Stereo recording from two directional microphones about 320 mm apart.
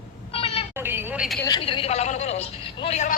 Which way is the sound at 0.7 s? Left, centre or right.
Centre.